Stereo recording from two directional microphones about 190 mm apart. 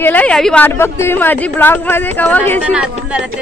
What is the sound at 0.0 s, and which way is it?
A woman's voice, 10° left (ahead or behind).